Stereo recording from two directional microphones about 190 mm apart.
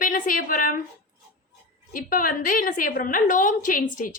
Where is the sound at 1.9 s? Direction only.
45° left (ahead or behind).